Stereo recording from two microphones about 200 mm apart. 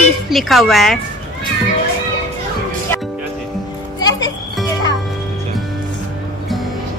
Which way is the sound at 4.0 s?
20° left (ahead or behind).